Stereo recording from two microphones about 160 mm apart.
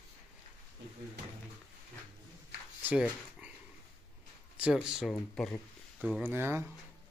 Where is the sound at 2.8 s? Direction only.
10° right (ahead or behind).